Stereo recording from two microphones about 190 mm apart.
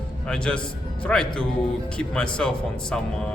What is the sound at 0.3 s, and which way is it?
A man's voice, 5° left (ahead or behind).